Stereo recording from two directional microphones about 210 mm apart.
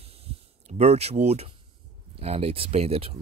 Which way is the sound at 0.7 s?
30° right (ahead or behind).